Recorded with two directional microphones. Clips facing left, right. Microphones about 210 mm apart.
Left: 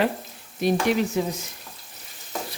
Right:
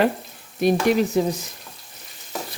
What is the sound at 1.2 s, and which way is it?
Frying, 35° right (ahead or behind).